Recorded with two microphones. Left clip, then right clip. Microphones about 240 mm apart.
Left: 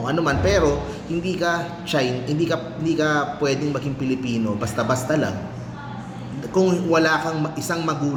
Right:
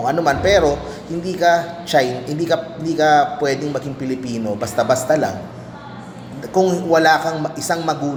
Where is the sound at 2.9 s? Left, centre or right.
Centre.